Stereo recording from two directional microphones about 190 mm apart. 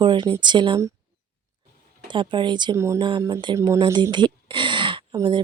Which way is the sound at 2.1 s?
25° right (ahead or behind).